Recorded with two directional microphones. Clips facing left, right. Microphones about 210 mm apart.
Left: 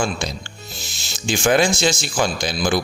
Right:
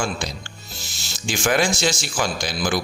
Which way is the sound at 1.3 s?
25° left (ahead or behind).